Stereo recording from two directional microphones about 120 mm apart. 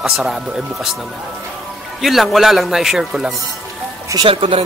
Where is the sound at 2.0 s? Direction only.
Centre (ahead or behind).